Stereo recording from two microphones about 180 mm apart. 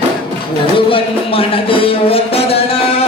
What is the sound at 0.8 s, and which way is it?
Music, 30° left (ahead or behind).